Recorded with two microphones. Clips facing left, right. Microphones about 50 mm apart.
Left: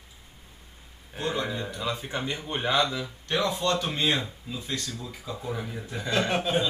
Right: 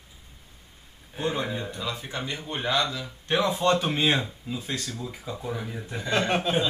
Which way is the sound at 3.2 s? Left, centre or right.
Right.